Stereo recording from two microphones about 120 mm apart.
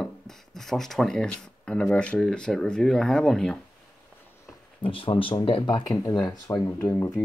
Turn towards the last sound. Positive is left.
turn(degrees=25)  # may be behind; listen again after turning